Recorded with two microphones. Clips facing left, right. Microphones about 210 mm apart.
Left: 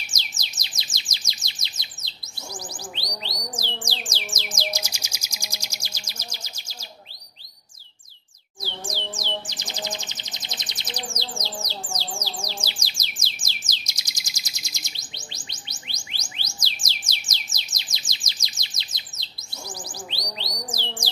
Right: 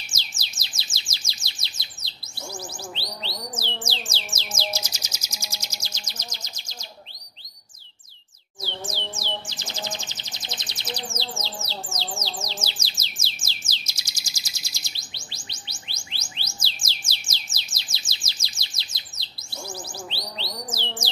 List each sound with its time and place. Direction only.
0.0 s chirp: 15° left (ahead or behind)
2.5 s bird: 15° left (ahead or behind)
3.8 s music: 15° left (ahead or behind)
8.8 s music: 15° left (ahead or behind)
12.4 s bird: 10° left (ahead or behind)
20.3 s bird: 15° left (ahead or behind)